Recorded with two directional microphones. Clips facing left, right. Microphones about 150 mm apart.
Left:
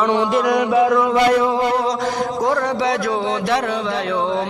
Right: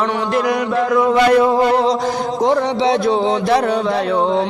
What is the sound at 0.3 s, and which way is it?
Chant, centre (ahead or behind).